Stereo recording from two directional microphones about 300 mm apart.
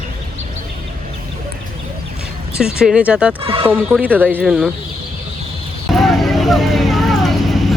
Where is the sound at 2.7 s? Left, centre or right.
Centre.